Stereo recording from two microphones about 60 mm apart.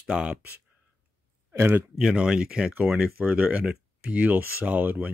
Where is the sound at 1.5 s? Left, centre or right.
Right.